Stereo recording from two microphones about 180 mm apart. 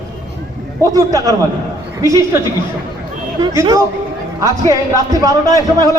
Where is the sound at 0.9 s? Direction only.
20° right (ahead or behind).